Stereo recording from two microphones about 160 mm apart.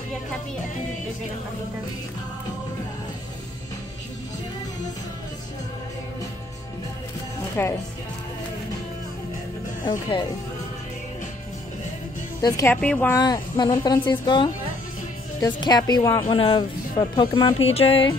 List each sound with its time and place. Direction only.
7.6 s speech: 15° left (ahead or behind)
12.4 s speech: 20° left (ahead or behind)
12.8 s speech: 5° left (ahead or behind)
13.1 s speech: 25° left (ahead or behind)
17.6 s a sound: 40° left (ahead or behind)